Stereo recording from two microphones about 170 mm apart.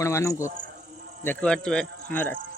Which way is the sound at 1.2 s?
5° left (ahead or behind).